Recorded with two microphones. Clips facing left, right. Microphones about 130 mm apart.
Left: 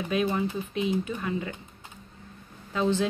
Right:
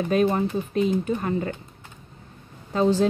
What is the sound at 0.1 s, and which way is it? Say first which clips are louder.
A woman's voice: right 5 dB; 45° right (ahead or behind).